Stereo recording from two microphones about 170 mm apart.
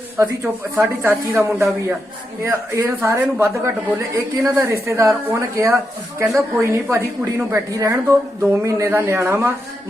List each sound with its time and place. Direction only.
0.2 s speech: 15° right (ahead or behind)